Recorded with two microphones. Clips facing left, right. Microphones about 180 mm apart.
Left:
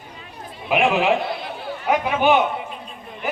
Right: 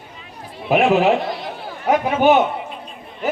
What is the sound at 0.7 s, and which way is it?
Speech, 40° right (ahead or behind).